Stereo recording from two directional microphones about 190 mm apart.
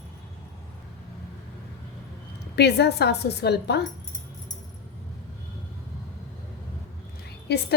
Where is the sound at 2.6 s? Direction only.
60° left (ahead or behind).